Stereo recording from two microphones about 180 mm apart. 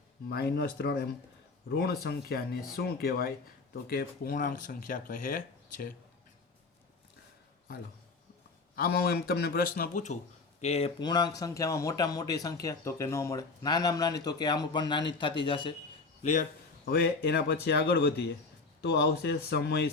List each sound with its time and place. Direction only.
0.3 s speech: 65° left (ahead or behind)
8.7 s speech: 55° left (ahead or behind); by 15.7 s 25° left (ahead or behind)
16.2 s speech: 45° left (ahead or behind); by 19.9 s 65° left (ahead or behind)